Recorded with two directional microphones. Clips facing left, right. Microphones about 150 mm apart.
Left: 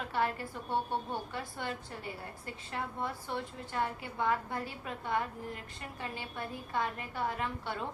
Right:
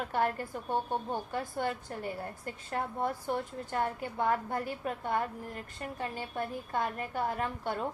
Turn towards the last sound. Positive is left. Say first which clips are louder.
# right 3 dB
turn(degrees=-45)  # may be behind; listen again after turning